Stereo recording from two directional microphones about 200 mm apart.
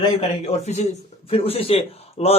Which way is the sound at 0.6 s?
35° left (ahead or behind).